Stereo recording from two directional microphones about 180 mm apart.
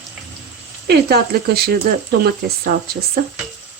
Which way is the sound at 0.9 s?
60° right (ahead or behind).